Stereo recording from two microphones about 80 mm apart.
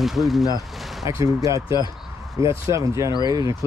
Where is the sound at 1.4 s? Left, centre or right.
Right.